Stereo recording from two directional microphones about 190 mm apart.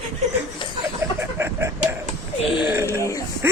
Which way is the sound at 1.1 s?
15° right (ahead or behind).